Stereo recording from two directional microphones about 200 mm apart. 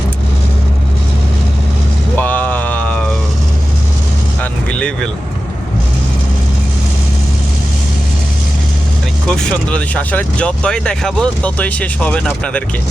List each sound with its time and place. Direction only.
2.1 s a sound: 10° left (ahead or behind)
4.7 s vehicle: 5° left (ahead or behind)
9.2 s speech: 5° left (ahead or behind)